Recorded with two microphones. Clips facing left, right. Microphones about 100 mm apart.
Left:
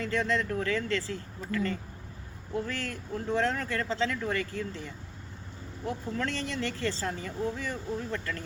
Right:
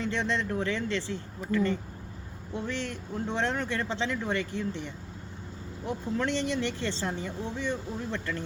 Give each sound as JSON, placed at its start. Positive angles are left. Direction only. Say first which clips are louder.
{"t": 0.0, "sound": "speech", "louder": "left 1 dB", "side_deg": -25}
{"t": 6.1, "sound": "speech", "louder": "right 7 dB", "side_deg": -20}